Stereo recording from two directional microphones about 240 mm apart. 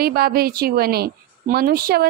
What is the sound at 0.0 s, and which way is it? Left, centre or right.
A woman's voice, right.